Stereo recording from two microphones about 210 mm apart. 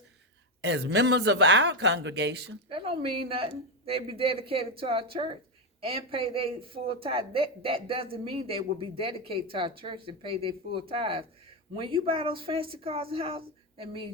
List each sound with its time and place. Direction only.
0.6 s speech: 55° right (ahead or behind)
2.6 s speech: 25° right (ahead or behind)